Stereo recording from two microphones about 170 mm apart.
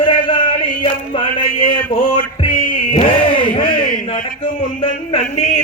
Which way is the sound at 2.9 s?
30° left (ahead or behind).